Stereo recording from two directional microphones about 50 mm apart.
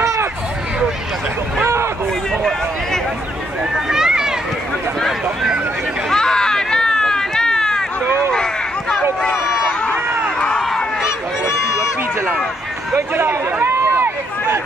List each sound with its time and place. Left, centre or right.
0.0 s a sound: right
3.9 s run: centre
6.0 s run: centre
11.1 s honk: left
12.9 s run: right